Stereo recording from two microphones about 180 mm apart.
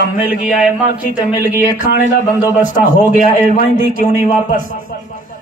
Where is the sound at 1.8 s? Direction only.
55° left (ahead or behind).